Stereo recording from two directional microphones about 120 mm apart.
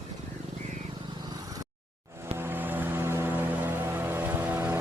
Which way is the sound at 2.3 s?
20° right (ahead or behind).